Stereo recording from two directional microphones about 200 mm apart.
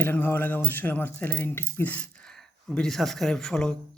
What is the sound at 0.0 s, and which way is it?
Speech, 10° left (ahead or behind).